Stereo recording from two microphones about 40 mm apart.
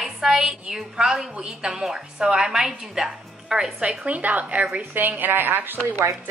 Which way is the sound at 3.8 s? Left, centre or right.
Right.